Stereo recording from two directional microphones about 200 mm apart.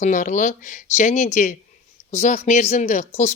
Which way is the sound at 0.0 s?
40° left (ahead or behind).